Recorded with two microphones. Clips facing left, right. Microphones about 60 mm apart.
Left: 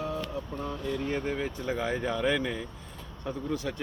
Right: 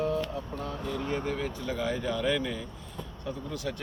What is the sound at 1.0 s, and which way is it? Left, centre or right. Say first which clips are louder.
Speech: right 1 dB; left.